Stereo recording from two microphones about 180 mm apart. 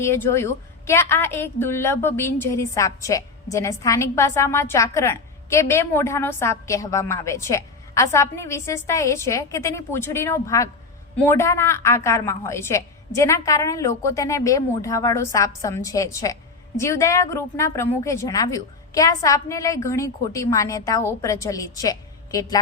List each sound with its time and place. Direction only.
0.0 s a woman's voice: 15° left (ahead or behind)